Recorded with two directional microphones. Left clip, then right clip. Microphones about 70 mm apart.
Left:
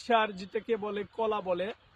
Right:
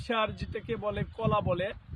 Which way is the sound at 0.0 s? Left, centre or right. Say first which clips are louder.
Left 3 dB; left.